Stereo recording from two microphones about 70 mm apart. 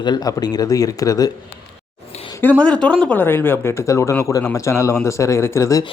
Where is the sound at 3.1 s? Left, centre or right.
Left.